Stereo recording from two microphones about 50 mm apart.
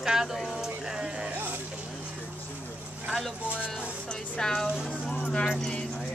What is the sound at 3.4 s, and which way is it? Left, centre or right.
Speech, right.